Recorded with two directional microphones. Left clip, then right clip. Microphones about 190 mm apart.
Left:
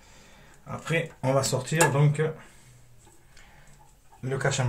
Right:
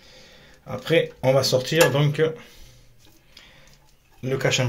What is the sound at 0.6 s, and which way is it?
Speech, 30° right (ahead or behind).